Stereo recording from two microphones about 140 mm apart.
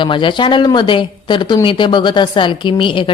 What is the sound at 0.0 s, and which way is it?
A woman's voice, 35° left (ahead or behind).